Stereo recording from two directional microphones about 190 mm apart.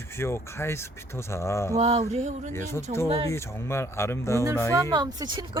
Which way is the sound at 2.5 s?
15° left (ahead or behind).